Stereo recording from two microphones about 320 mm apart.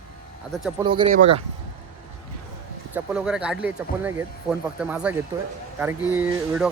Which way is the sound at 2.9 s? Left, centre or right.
Centre.